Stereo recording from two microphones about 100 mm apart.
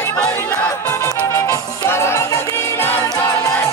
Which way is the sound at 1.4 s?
30° left (ahead or behind).